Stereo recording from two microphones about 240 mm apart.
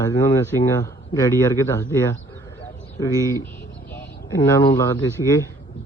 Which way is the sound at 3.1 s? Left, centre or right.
Centre.